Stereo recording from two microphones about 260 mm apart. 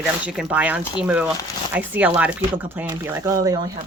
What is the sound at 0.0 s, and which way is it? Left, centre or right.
Speech, centre.